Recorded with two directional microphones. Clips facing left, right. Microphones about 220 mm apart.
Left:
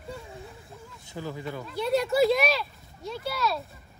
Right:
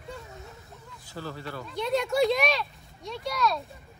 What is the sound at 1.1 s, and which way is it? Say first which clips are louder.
Speech: left 2 dB; 15° left (ahead or behind).